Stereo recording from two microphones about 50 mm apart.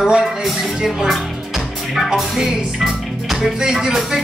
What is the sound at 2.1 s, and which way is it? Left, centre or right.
Music, centre.